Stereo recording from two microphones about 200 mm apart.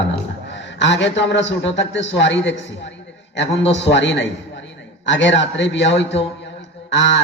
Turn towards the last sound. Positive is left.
turn(degrees=65)  # may be behind; listen again after turning